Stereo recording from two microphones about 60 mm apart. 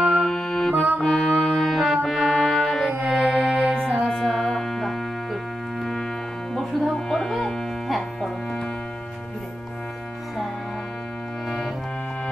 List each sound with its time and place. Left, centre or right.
0.0 s music: centre
6.5 s music: centre